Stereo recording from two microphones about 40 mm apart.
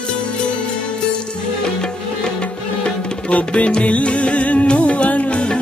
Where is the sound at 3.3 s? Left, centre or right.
Left.